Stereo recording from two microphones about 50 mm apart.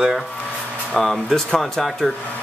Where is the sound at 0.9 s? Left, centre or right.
Centre.